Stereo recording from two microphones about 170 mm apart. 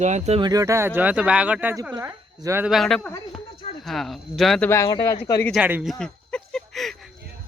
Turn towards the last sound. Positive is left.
turn(degrees=0)  # may be behind; listen again after turning